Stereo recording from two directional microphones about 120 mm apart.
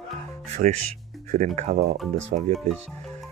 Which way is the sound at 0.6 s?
90° right.